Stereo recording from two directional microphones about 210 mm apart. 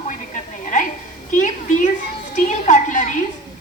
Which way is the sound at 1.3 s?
35° left (ahead or behind).